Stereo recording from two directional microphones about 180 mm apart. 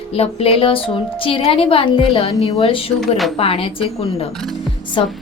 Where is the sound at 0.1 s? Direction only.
35° left (ahead or behind).